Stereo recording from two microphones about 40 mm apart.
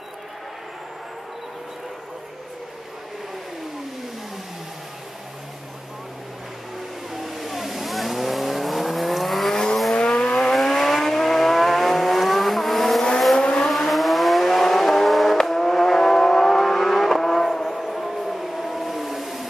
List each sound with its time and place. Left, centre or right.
7.2 s vehicle: centre
9.9 s vehicle: left
10.5 s vehicle: centre
13.4 s vehicle: left
13.7 s vehicle: centre